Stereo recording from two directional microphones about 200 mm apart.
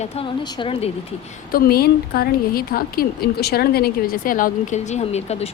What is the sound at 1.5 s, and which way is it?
A woman's voice, 50° left (ahead or behind).